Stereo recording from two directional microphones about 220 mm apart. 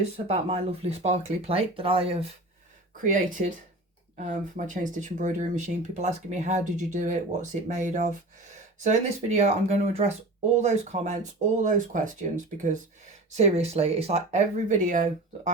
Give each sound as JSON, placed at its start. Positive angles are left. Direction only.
{"t": 0.3, "sound": "speech", "side_deg": -25}
{"t": 3.0, "sound": "speech", "side_deg": -35}